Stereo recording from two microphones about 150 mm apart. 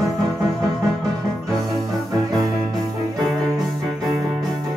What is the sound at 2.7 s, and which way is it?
Music, centre (ahead or behind).